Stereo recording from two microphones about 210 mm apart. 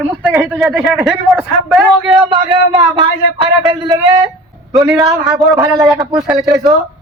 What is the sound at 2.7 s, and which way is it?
A man's voice, 20° right (ahead or behind).